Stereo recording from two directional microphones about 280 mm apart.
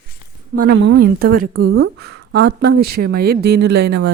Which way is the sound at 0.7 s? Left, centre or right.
Right.